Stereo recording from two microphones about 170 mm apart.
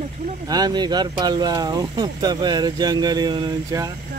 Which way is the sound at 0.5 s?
25° right (ahead or behind).